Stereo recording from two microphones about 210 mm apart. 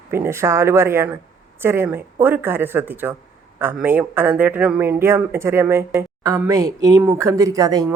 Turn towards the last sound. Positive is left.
turn(degrees=-15)  # may be behind; listen again after turning